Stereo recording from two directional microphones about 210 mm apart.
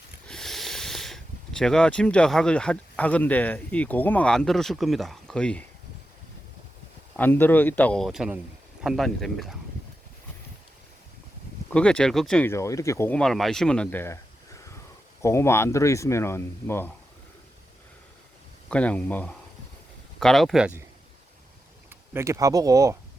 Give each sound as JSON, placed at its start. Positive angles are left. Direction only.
{"t": 0.3, "sound": "speech", "side_deg": 0}
{"t": 7.2, "sound": "speech", "side_deg": 10}
{"t": 11.7, "sound": "speech", "side_deg": 5}
{"t": 18.7, "sound": "speech", "side_deg": 5}
{"t": 21.8, "sound": "speech", "side_deg": -10}